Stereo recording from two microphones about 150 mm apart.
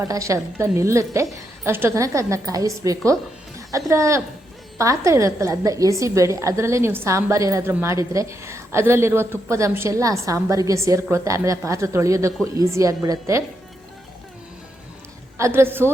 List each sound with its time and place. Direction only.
0.0 s a woman's voice: 20° right (ahead or behind)
15.4 s a woman's voice: 20° right (ahead or behind)